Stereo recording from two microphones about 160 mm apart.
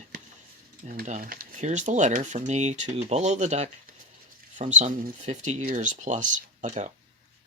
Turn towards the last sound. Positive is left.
turn(degrees=-50)  # may be behind; listen again after turning